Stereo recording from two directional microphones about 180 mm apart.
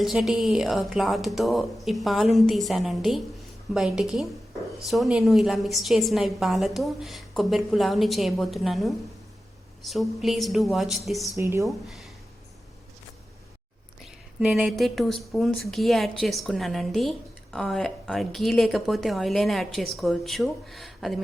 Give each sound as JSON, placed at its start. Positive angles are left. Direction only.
{"t": 0.0, "sound": "speech", "side_deg": 0}
{"t": 11.3, "sound": "speech", "side_deg": -15}
{"t": 11.9, "sound": "speech", "side_deg": 0}
{"t": 14.0, "sound": "speech", "side_deg": -5}